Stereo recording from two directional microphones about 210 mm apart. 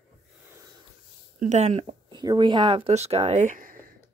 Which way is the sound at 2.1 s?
20° right (ahead or behind).